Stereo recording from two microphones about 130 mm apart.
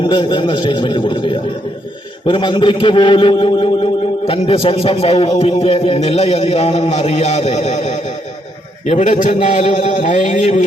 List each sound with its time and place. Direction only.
0.0 s a man's voice: 40° left (ahead or behind); by 10.6 s 60° left (ahead or behind)